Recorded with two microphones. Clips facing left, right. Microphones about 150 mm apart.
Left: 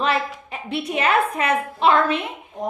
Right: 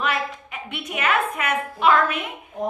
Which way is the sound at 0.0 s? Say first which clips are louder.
Left 3 dB; 30° left (ahead or behind).